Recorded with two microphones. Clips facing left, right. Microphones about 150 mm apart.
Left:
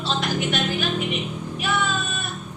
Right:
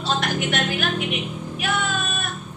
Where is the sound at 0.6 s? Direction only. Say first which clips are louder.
Even; 60° right (ahead or behind).